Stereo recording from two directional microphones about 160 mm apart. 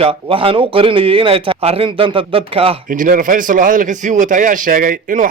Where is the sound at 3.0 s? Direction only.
55° right (ahead or behind).